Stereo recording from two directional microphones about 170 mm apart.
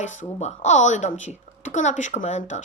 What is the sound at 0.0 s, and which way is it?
Speech, 45° left (ahead or behind).